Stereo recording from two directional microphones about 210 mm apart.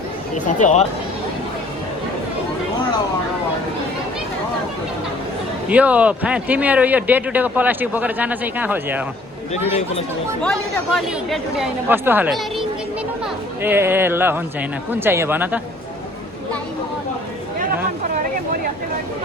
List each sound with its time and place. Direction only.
0.3 s speech: 35° left (ahead or behind)
5.6 s speech: 5° right (ahead or behind)
10.9 s speech: centre (ahead or behind)